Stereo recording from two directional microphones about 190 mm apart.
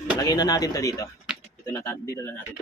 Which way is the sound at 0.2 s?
20° left (ahead or behind).